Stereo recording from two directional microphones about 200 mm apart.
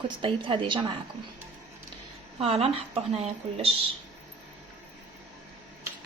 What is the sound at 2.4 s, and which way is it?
Speech, 30° right (ahead or behind).